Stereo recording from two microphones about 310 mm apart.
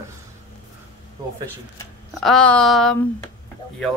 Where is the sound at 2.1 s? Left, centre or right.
Centre.